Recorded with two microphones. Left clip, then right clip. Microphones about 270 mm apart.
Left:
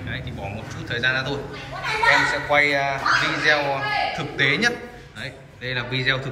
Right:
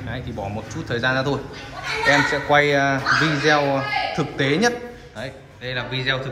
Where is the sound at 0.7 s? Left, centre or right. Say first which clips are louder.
Right 1 dB; centre.